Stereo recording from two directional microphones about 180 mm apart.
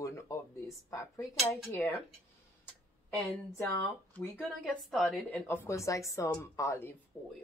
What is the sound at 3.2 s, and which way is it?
Speech, 10° left (ahead or behind).